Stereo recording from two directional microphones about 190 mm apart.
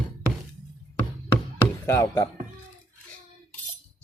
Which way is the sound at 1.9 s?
15° left (ahead or behind).